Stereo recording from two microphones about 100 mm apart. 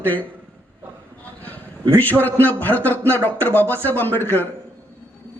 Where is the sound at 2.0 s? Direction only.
20° left (ahead or behind).